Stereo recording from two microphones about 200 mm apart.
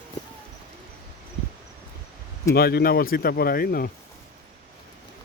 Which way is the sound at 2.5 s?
50° left (ahead or behind).